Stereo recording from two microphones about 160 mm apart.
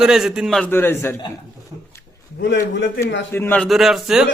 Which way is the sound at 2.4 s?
90° left.